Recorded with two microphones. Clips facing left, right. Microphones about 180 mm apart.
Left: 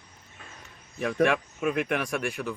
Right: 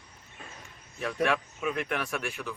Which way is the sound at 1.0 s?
50° left (ahead or behind).